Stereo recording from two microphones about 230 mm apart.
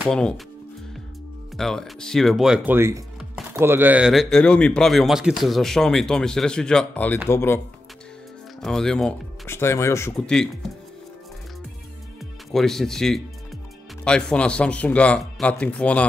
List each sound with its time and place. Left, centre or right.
0.0 s speech: centre
1.6 s speech: centre
8.6 s speech: centre
12.4 s speech: centre